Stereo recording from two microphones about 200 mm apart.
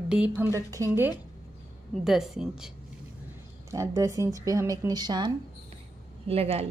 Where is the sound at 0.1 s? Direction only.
10° right (ahead or behind).